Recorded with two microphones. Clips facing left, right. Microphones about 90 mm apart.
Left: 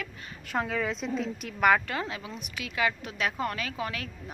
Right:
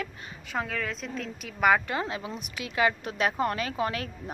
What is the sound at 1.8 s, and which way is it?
A woman's voice, 25° right (ahead or behind).